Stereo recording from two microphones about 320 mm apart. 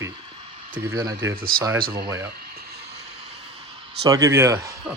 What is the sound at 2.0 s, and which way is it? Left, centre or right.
Speech, centre.